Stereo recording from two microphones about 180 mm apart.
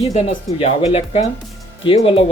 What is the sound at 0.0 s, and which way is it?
Speech, 40° left (ahead or behind).